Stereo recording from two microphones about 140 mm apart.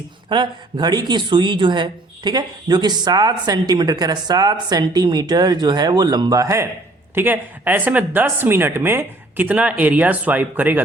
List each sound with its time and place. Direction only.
0.3 s speech: 35° right (ahead or behind); by 10.8 s 15° right (ahead or behind)